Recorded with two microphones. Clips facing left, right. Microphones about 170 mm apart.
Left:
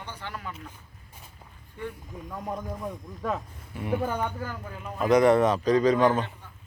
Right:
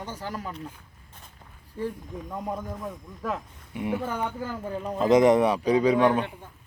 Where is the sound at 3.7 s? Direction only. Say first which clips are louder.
Left 1 dB; 20° right (ahead or behind).